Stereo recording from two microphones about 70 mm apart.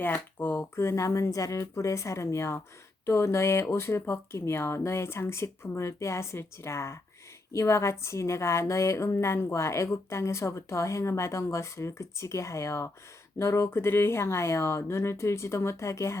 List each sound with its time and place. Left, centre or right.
0.0 s speech: left
0.8 s a woman's voice: left